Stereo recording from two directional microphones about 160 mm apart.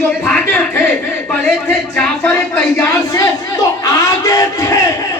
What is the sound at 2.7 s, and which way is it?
Speech, 20° left (ahead or behind).